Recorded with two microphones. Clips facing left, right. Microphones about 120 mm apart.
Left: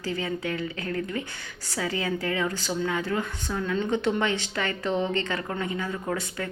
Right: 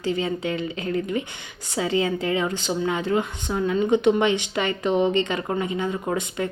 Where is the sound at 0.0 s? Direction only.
20° right (ahead or behind).